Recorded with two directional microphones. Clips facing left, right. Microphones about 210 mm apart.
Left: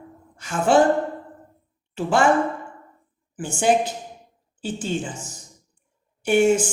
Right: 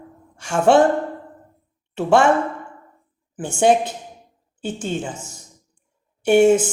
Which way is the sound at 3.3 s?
60° right (ahead or behind).